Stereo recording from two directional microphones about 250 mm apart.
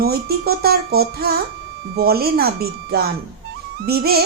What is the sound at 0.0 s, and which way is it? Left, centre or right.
A child's voice, right.